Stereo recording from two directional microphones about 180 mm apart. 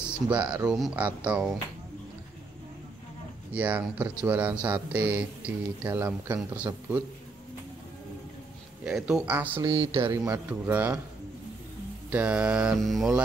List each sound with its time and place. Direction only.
0.0 s speech: 10° right (ahead or behind)
3.5 s speech: 10° right (ahead or behind)
8.8 s speech: 5° right (ahead or behind)
9.6 s speech: 20° right (ahead or behind)
12.1 s mantra: 5° right (ahead or behind)